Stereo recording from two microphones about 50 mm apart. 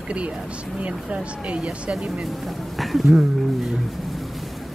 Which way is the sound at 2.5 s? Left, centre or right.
Centre.